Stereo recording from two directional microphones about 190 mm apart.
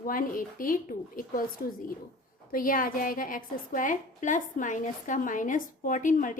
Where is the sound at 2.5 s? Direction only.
50° left (ahead or behind).